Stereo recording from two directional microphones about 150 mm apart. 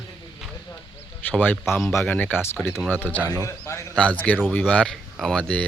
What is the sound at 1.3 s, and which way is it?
Speech, 10° left (ahead or behind).